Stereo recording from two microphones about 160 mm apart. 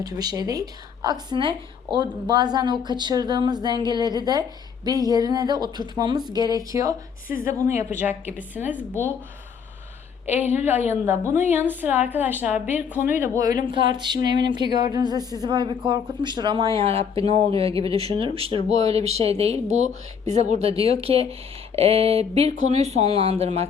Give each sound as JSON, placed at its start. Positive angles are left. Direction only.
{"t": 0.0, "sound": "a woman's voice", "side_deg": -25}
{"t": 10.2, "sound": "a woman's voice", "side_deg": -10}
{"t": 13.7, "sound": "a woman's voice", "side_deg": -30}